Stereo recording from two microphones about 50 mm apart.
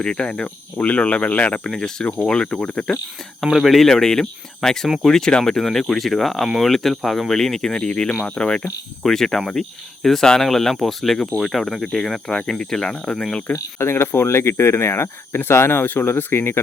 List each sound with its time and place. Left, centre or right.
0.0 s speech: centre
0.4 s speech: left
1.7 s speech: centre
3.4 s speech: centre
3.8 s speech: centre
13.5 s speech: left